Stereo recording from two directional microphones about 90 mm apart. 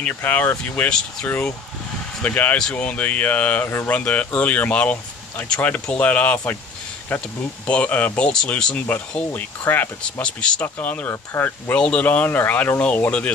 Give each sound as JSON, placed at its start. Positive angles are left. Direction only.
{"t": 0.1, "sound": "speech", "side_deg": 20}
{"t": 9.3, "sound": "speech", "side_deg": 20}
{"t": 11.7, "sound": "speech", "side_deg": 15}